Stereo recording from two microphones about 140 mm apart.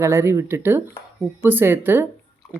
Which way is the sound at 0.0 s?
20° right (ahead or behind).